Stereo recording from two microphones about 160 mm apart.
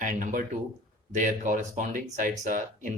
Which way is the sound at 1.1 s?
55° right (ahead or behind).